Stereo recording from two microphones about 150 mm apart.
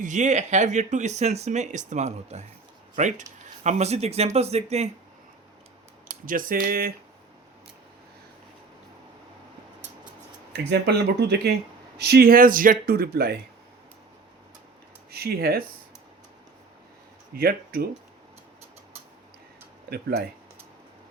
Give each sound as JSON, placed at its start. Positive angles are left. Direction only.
{"t": 0.0, "sound": "speech", "side_deg": -55}
{"t": 6.1, "sound": "speech", "side_deg": -65}
{"t": 10.5, "sound": "speech", "side_deg": -90}
{"t": 15.1, "sound": "speech", "side_deg": -90}
{"t": 17.3, "sound": "speech", "side_deg": -85}
{"t": 19.9, "sound": "speech", "side_deg": -90}